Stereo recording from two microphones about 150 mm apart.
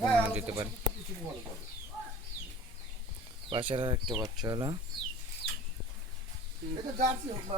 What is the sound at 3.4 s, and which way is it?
Speech, 35° right (ahead or behind).